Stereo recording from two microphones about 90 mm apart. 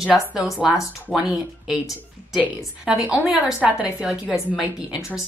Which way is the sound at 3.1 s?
5° right (ahead or behind).